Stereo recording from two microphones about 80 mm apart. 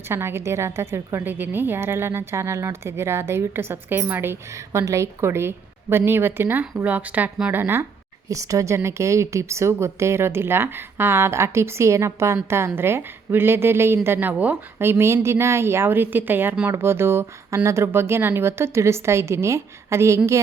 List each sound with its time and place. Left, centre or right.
0.1 s a woman's voice: right
1.2 s speech: right
8.3 s a woman's voice: right; by 14.6 s centre
14.8 s a woman's voice: right